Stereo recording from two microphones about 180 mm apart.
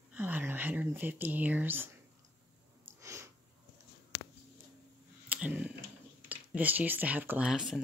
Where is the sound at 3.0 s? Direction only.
15° right (ahead or behind).